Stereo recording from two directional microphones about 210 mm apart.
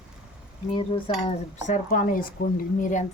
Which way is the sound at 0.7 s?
25° left (ahead or behind).